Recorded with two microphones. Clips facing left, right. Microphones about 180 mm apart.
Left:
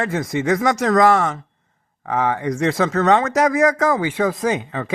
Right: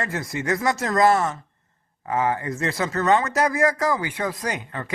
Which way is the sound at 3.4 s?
20° left (ahead or behind).